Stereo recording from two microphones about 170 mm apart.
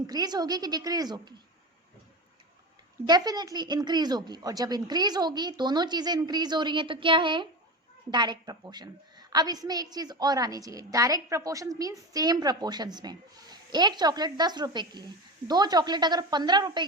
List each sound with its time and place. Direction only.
0.1 s a woman's voice: 25° right (ahead or behind)
3.1 s a woman's voice: 25° right (ahead or behind)